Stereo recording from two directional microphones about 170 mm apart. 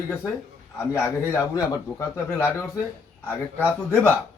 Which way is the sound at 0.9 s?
20° left (ahead or behind).